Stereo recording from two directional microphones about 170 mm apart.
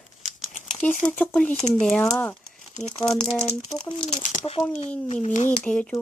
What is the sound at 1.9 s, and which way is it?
Speech, 10° left (ahead or behind).